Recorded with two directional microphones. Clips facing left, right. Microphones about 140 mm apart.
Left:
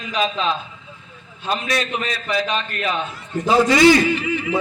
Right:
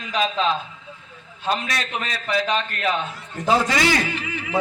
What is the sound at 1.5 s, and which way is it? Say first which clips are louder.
A man's voice: left 2 dB; 20° left (ahead or behind).